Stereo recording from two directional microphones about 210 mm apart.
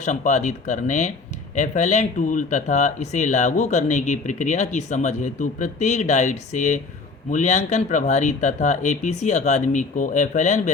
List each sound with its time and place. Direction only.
0.0 s speech: 35° left (ahead or behind)